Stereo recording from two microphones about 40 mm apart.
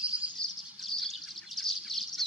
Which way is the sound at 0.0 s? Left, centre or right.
Right.